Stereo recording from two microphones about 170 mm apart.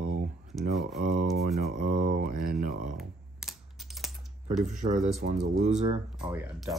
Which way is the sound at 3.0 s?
Centre (ahead or behind).